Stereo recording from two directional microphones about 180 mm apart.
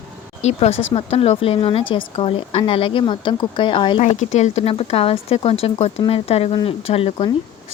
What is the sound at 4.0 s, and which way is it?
Speech, 40° left (ahead or behind).